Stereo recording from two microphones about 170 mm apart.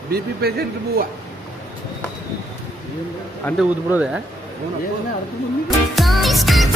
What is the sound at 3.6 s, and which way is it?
Speech, 5° right (ahead or behind).